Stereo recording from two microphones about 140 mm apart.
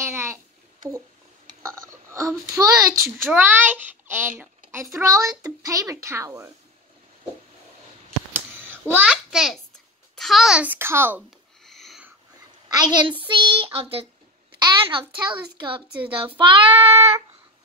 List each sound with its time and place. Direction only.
0.0 s babbling: 20° right (ahead or behind)
1.6 s a child's voice: 20° right (ahead or behind)
3.3 s a child's voice: 15° right (ahead or behind)
8.3 s a sound: 15° right (ahead or behind)
10.1 s a child's voice: centre (ahead or behind)
11.6 s sniff: centre (ahead or behind)
12.6 s a child's voice: 30° right (ahead or behind)